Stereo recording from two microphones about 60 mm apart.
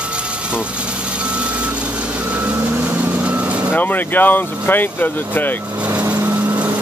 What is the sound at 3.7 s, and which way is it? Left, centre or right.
Speech, left.